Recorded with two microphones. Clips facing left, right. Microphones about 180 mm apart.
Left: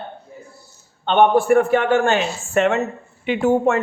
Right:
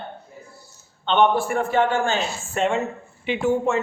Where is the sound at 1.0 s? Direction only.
50° left (ahead or behind).